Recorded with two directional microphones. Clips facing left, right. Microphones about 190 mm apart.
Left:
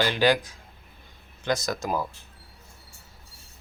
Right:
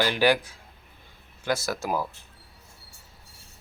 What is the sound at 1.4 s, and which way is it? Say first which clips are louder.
Speech: left 1 dB; 5° right (ahead or behind).